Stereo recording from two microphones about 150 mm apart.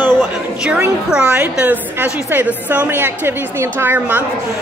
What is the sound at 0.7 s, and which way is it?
A woman's voice, 5° right (ahead or behind).